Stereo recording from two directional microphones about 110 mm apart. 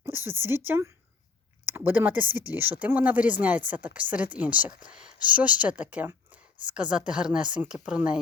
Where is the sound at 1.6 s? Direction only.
20° right (ahead or behind).